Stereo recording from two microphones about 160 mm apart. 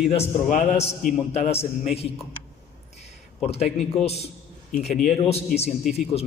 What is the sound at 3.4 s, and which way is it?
A man's voice, 40° left (ahead or behind).